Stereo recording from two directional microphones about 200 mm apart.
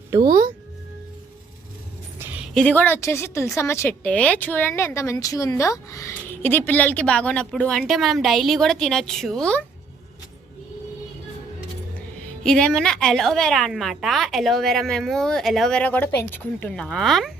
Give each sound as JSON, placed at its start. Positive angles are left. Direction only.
{"t": 0.2, "sound": "speech", "side_deg": -45}
{"t": 2.6, "sound": "a woman's voice", "side_deg": 10}
{"t": 12.4, "sound": "a woman's voice", "side_deg": 5}